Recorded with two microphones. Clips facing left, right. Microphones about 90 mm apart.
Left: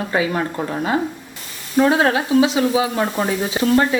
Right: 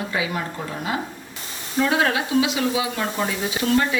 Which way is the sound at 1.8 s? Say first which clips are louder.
Left 4 dB; 35° left (ahead or behind).